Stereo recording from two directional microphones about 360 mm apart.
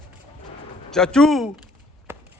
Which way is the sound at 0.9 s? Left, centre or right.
Centre.